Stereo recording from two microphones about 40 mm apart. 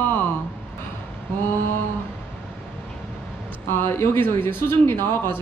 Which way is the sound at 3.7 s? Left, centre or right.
Left.